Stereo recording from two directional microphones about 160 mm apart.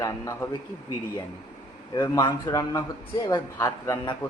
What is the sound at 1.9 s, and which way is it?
A man's voice, 15° left (ahead or behind).